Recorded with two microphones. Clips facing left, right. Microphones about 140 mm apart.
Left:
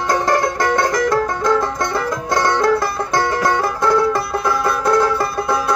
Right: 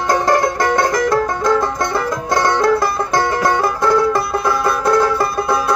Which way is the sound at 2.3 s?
15° right (ahead or behind).